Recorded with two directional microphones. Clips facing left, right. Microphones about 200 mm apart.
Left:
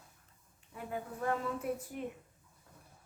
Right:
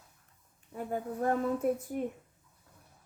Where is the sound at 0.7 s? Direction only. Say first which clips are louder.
Right 6 dB; 45° right (ahead or behind).